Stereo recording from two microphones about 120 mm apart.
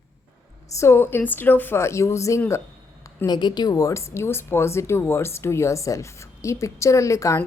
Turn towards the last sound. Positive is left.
turn(degrees=25)  # may be behind; listen again after turning